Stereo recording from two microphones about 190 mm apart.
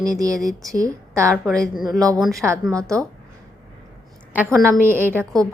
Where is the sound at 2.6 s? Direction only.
15° right (ahead or behind).